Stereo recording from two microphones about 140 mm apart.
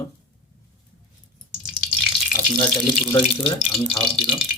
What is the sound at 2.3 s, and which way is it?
Water tap, 20° left (ahead or behind).